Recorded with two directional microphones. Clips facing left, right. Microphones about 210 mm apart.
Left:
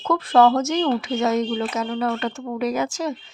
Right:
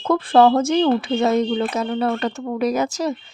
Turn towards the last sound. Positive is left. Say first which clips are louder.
# right 3 dB
turn(degrees=-35)  # may be behind; listen again after turning